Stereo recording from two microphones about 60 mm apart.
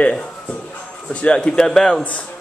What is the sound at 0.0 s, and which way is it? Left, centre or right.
Speech, left.